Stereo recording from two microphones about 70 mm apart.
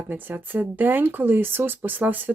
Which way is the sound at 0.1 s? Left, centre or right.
Right.